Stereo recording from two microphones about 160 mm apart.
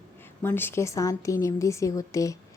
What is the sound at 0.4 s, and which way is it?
A woman's voice, 15° left (ahead or behind).